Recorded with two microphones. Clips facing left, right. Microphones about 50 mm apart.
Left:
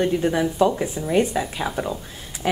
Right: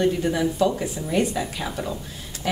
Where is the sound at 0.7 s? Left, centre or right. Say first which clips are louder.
Left 2 dB; centre.